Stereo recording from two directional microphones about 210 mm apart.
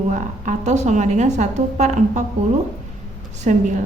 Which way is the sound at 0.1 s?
35° right (ahead or behind).